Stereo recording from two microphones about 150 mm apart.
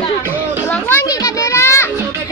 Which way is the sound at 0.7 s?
15° left (ahead or behind).